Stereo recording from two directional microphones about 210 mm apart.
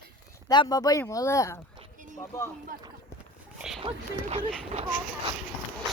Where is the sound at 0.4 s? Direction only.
20° left (ahead or behind).